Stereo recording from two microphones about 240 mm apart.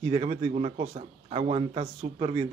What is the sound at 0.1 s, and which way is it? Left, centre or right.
A man's voice, right.